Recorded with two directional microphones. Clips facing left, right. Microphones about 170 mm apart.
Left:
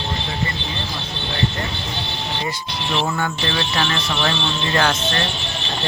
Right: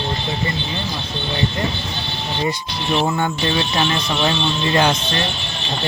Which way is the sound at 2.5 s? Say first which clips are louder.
Right 3 dB; 15° right (ahead or behind).